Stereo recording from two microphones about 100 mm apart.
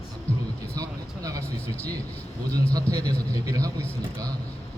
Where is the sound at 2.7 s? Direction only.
40° right (ahead or behind).